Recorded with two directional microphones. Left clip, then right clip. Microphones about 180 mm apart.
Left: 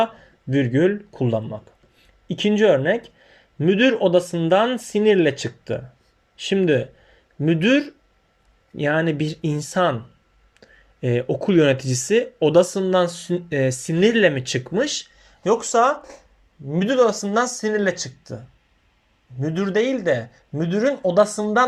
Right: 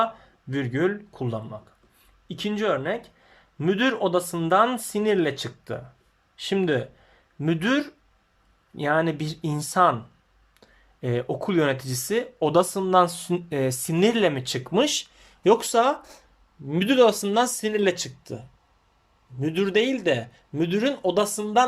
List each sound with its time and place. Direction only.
0.5 s speech: 5° left (ahead or behind)
14.7 s speech: 15° right (ahead or behind)